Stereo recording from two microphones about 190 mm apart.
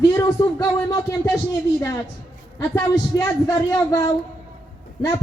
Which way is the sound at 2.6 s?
15° left (ahead or behind).